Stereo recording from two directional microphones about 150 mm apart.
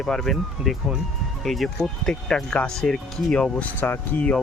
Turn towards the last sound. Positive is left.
turn(degrees=10)  # may be behind; listen again after turning